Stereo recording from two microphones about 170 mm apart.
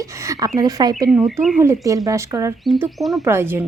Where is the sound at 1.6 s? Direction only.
15° right (ahead or behind).